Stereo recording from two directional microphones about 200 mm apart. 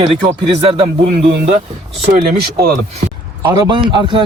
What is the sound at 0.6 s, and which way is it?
Speech, 30° right (ahead or behind).